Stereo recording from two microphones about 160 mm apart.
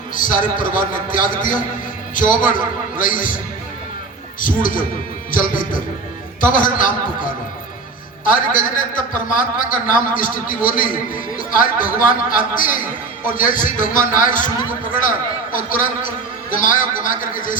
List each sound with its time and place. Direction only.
0.1 s a man's voice: 55° left (ahead or behind)